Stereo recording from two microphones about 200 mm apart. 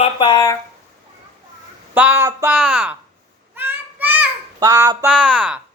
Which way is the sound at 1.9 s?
10° right (ahead or behind).